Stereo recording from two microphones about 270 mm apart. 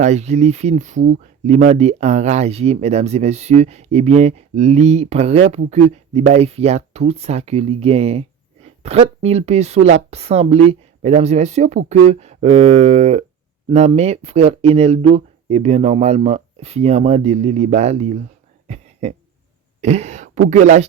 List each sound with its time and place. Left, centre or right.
0.0 s speech: right
18.7 s a sound: right
19.8 s speech: right